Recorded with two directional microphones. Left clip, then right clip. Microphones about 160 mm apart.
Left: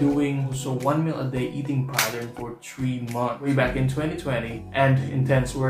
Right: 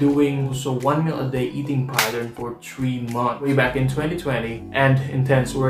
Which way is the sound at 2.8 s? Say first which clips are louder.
Right 4 dB; centre (ahead or behind).